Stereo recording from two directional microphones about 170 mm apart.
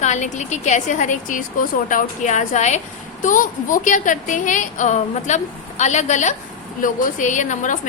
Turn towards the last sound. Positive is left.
turn(degrees=45)  # may be behind; listen again after turning